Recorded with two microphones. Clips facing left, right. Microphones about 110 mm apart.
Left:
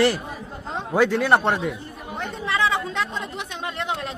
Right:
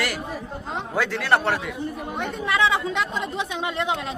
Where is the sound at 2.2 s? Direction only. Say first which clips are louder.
Right 1 dB; centre (ahead or behind).